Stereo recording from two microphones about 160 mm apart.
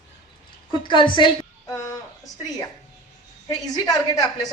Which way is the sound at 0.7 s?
30° left (ahead or behind).